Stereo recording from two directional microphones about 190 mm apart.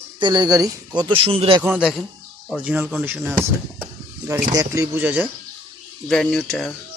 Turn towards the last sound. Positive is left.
turn(degrees=0)  # may be behind; listen again after turning